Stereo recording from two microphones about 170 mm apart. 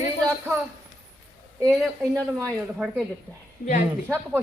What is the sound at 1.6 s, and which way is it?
A man's voice, 15° right (ahead or behind).